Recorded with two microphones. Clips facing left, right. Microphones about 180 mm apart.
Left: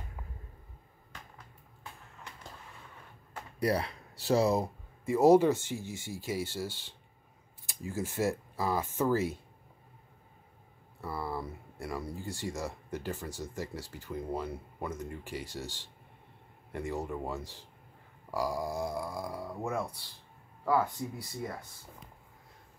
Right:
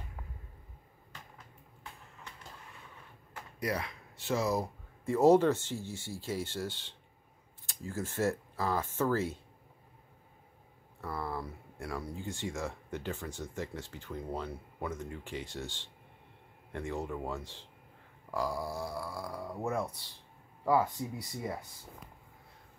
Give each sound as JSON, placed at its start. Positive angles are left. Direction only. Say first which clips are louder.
{"t": 3.5, "sound": "speech", "louder": "left 5 dB", "side_deg": 35}
{"t": 5.0, "sound": "speech", "louder": "left 1 dB", "side_deg": 10}
{"t": 11.0, "sound": "speech", "louder": "left 1 dB", "side_deg": 5}
{"t": 15.4, "sound": "speech", "louder": "left 1 dB", "side_deg": 40}
{"t": 16.7, "sound": "speech", "louder": "left 1 dB", "side_deg": 5}
{"t": 19.4, "sound": "speech", "louder": "right 2 dB", "side_deg": 0}